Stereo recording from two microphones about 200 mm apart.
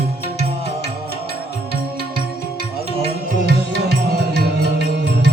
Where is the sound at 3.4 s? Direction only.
55° right (ahead or behind).